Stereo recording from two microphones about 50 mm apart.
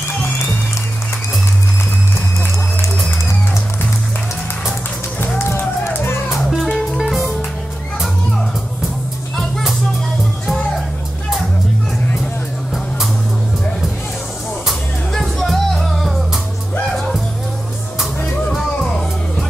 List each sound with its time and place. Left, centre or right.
5.4 s music: left
7.0 s music: centre
9.4 s music: centre
14.7 s music: centre